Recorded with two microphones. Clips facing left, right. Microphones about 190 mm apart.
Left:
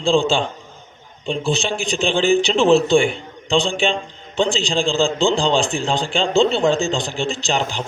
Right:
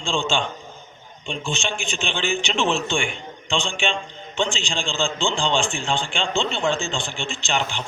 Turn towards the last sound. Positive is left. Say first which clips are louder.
# left 4 dB
turn(degrees=40)  # may be behind; listen again after turning